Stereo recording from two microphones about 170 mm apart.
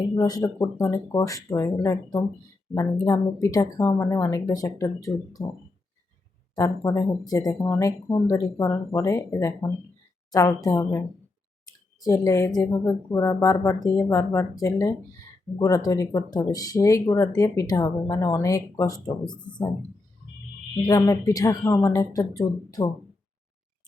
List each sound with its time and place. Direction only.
0.2 s speech: 20° left (ahead or behind)
6.6 s speech: 20° left (ahead or behind)
20.8 s speech: 20° left (ahead or behind)